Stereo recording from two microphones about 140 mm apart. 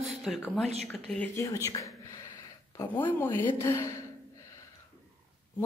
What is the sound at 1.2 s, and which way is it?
A woman's voice, 20° left (ahead or behind).